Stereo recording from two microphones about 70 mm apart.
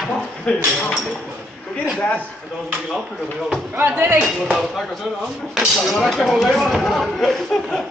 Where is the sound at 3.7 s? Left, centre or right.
Right.